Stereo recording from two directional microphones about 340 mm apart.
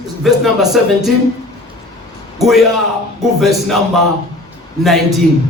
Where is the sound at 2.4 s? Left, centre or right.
Centre.